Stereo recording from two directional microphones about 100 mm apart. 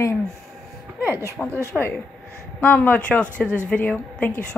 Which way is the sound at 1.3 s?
15° left (ahead or behind).